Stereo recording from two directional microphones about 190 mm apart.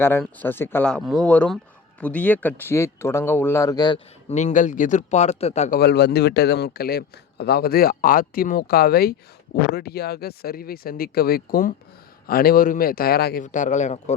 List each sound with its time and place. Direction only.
0.2 s speech: 10° left (ahead or behind)
4.3 s a man's voice: 40° left (ahead or behind)
5.8 s a man's voice: 60° left (ahead or behind); by 14.2 s 35° left (ahead or behind)